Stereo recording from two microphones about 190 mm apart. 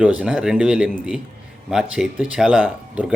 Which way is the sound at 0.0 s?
5° right (ahead or behind).